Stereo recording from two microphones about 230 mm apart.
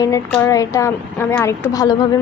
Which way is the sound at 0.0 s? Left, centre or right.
Centre.